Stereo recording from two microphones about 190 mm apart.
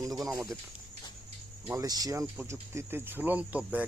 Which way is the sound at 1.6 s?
15° right (ahead or behind).